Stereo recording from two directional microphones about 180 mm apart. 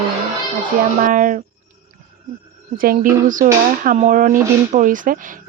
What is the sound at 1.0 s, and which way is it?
Speech, 45° right (ahead or behind).